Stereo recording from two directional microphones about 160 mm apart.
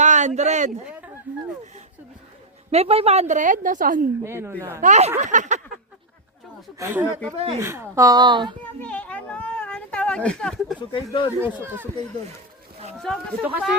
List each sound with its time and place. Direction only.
0.0 s speech: 50° right (ahead or behind)
2.7 s a woman's voice: 40° right (ahead or behind); by 4.0 s 55° right (ahead or behind)
4.2 s speech: 15° right (ahead or behind)
4.8 s a woman's voice: 45° right (ahead or behind)
6.7 s speech: 15° right (ahead or behind)
7.3 s speech: 40° right (ahead or behind)
7.6 s speech: 15° right (ahead or behind)
8.8 s a sound: 10° left (ahead or behind)
10.8 s speech: 30° left (ahead or behind)
11.3 s speech: 15° right (ahead or behind)
13.1 s speech: 5° left (ahead or behind)